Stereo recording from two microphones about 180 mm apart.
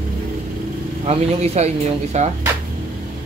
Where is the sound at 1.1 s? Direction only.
35° right (ahead or behind).